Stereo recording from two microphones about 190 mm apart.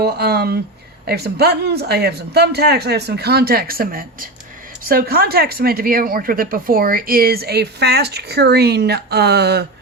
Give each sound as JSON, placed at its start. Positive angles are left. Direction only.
{"t": 0.0, "sound": "speech", "side_deg": -60}